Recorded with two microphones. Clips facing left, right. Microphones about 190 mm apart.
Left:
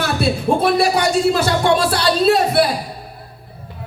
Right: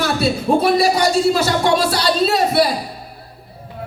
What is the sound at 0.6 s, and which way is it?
Speech, 55° left (ahead or behind).